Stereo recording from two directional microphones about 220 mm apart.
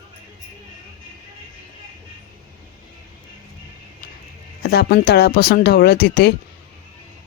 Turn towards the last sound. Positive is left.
turn(degrees=45)  # may be behind; listen again after turning